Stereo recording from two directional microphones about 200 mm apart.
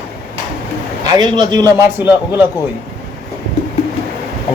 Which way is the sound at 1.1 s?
20° right (ahead or behind).